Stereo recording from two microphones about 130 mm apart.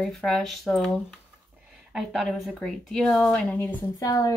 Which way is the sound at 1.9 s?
Centre (ahead or behind).